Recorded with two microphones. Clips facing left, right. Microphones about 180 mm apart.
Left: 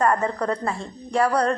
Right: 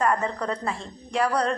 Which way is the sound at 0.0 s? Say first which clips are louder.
Left 3 dB; 40° left (ahead or behind).